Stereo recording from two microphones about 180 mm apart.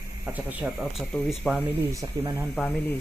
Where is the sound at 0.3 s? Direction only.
5° right (ahead or behind).